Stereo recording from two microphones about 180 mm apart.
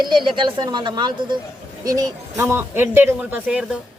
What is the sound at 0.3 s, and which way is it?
Speech, 25° right (ahead or behind).